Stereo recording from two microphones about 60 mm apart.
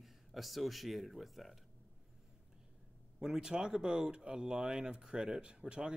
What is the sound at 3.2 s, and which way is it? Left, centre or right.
Speech, centre.